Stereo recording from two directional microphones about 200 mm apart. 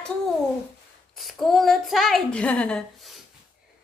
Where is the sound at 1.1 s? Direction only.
Centre (ahead or behind).